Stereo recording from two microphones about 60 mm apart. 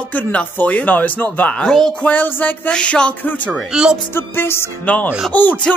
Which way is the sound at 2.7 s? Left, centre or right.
Centre.